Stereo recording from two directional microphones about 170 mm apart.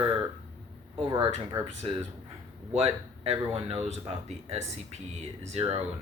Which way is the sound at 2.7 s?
35° right (ahead or behind).